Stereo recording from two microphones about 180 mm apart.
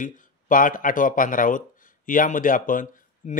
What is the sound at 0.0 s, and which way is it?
Speech, 50° left (ahead or behind).